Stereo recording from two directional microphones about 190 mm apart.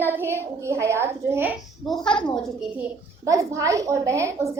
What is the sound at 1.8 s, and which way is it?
Speech, centre (ahead or behind).